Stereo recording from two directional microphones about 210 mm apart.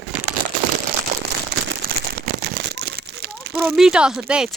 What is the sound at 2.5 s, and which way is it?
Crumpling, 55° right (ahead or behind).